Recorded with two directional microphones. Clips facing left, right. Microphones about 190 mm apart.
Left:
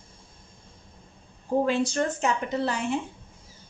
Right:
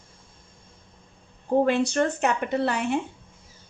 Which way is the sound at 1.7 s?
65° right (ahead or behind).